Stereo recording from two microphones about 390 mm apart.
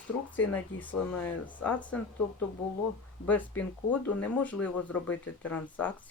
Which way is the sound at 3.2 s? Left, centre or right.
Centre.